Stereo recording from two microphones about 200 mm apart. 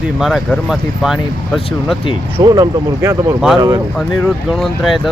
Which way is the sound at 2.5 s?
15° right (ahead or behind).